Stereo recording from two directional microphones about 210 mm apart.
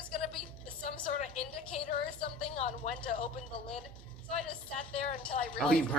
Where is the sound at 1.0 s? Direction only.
30° left (ahead or behind).